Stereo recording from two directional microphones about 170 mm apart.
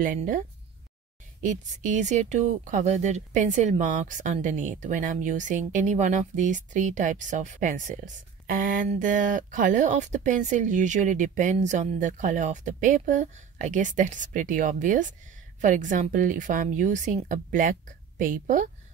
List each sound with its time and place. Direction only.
0.0 s speech: 50° right (ahead or behind)
1.4 s speech: 45° right (ahead or behind)